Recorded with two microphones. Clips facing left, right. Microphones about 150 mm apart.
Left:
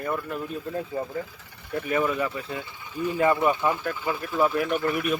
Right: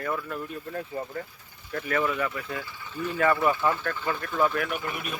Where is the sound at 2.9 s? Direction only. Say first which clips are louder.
Left 2 dB; 15° left (ahead or behind).